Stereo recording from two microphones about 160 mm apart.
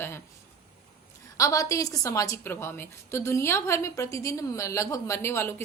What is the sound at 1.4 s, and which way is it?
A woman's voice, 20° left (ahead or behind).